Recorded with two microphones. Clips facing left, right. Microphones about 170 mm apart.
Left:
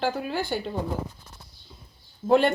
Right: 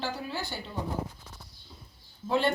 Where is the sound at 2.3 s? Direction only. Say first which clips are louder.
Left 7 dB; 55° left (ahead or behind).